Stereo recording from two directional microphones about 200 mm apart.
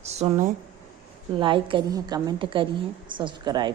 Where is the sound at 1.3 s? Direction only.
25° right (ahead or behind).